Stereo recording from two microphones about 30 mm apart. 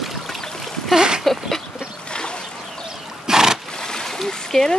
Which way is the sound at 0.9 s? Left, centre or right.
Right.